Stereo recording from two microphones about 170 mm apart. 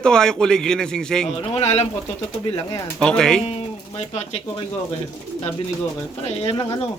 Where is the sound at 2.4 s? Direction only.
30° left (ahead or behind).